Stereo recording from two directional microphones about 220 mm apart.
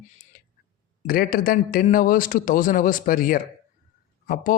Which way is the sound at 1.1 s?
40° left (ahead or behind).